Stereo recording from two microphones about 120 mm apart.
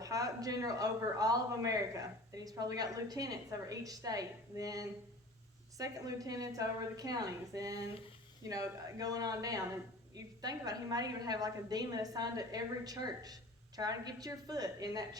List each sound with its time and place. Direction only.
0.0 s a woman's voice: 30° right (ahead or behind)